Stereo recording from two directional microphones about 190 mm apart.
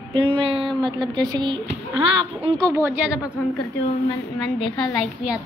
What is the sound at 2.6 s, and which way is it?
Speech, 15° right (ahead or behind).